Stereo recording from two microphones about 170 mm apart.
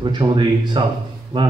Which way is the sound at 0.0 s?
30° right (ahead or behind).